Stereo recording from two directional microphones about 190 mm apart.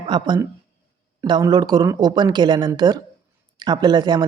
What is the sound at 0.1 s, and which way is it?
Speech, 25° right (ahead or behind).